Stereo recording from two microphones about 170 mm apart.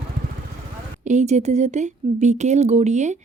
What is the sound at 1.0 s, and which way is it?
Speech, 45° right (ahead or behind).